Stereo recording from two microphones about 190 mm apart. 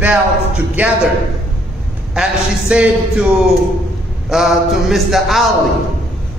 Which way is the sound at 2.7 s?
5° right (ahead or behind).